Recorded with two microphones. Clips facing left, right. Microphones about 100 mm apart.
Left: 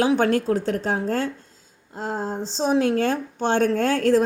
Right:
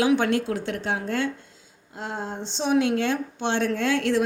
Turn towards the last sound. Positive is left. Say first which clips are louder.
# left 4 dB
turn(degrees=40)  # may be behind; listen again after turning